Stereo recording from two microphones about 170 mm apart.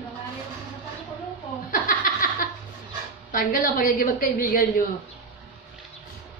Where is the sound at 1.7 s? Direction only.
55° left (ahead or behind).